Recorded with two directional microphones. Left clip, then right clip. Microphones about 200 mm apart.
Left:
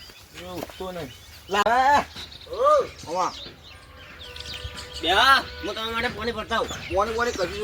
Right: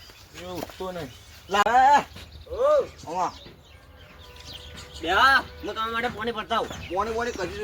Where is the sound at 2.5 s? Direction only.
35° left (ahead or behind).